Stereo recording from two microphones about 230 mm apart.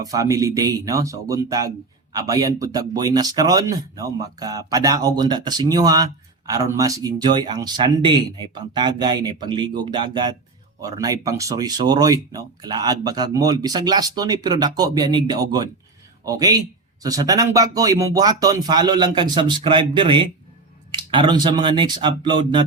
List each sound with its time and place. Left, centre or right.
0.0 s speech: centre